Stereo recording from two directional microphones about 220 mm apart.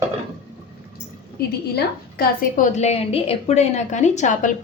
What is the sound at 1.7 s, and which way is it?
A woman's voice, 40° left (ahead or behind).